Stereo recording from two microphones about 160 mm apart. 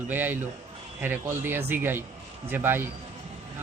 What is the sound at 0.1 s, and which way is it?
Speech, 10° right (ahead or behind).